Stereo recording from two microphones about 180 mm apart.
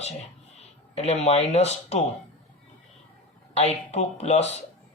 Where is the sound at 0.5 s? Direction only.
35° left (ahead or behind).